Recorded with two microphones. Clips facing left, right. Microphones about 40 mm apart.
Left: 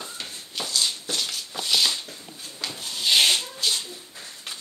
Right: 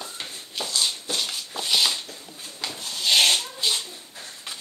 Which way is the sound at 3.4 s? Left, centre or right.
Right.